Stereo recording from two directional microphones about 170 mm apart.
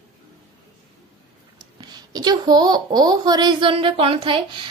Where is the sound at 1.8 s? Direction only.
25° right (ahead or behind).